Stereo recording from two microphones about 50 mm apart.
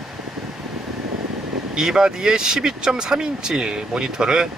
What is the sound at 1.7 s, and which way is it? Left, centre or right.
Speech, centre.